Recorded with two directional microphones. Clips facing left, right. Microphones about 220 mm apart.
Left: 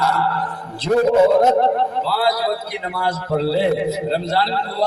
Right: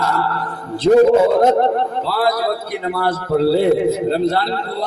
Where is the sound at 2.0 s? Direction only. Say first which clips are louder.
Right 2 dB; 50° right (ahead or behind).